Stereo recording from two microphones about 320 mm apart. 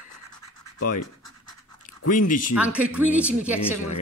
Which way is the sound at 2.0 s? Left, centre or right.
Left.